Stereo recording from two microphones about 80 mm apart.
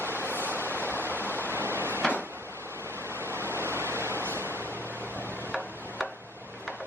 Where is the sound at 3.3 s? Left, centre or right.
Right.